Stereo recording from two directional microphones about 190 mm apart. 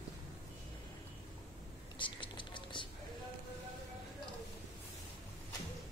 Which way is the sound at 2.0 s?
25° left (ahead or behind).